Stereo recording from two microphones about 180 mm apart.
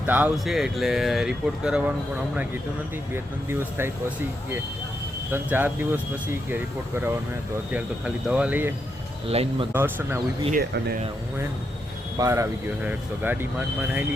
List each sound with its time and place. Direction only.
0.0 s speech: 10° right (ahead or behind)
3.5 s speech: 15° right (ahead or behind)
5.3 s speech: 10° right (ahead or behind)
9.2 s speech: 35° right (ahead or behind)
9.7 s speech: 15° right (ahead or behind)
10.5 s speech: 60° right (ahead or behind)
12.1 s speech: 20° right (ahead or behind)